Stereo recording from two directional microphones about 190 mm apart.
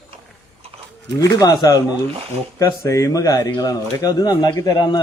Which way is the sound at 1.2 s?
20° left (ahead or behind).